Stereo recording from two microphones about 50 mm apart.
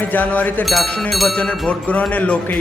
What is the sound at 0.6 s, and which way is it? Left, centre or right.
Speech, centre.